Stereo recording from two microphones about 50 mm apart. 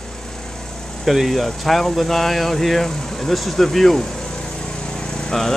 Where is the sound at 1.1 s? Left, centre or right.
Centre.